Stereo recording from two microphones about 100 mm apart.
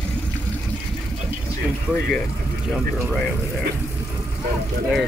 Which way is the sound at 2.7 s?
5° left (ahead or behind).